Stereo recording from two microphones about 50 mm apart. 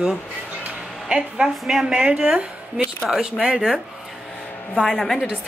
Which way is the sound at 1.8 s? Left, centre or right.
Centre.